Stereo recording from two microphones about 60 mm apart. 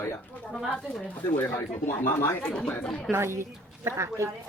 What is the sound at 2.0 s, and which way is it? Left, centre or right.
Speech, left.